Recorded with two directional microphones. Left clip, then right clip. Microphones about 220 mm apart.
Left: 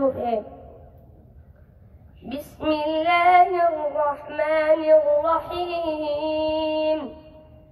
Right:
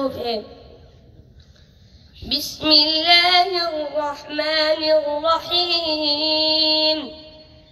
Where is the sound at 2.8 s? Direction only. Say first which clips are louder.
Right 6 dB; 20° right (ahead or behind).